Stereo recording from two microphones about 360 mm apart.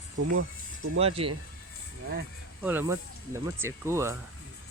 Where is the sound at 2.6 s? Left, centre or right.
Centre.